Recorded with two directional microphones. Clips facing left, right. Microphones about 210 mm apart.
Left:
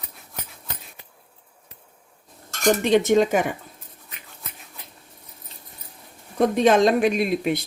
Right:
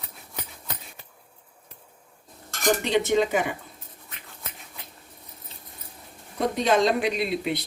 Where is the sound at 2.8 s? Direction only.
50° left (ahead or behind).